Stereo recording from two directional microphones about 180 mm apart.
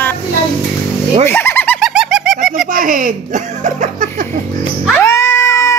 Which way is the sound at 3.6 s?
45° right (ahead or behind).